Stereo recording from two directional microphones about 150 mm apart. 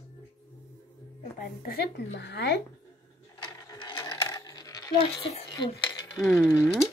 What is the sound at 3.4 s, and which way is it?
Coin, 30° left (ahead or behind).